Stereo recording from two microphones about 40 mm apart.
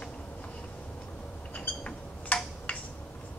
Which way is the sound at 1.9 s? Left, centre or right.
Left.